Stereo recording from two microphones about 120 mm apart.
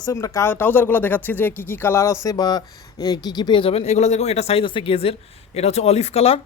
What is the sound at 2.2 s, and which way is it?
Speech, 35° left (ahead or behind).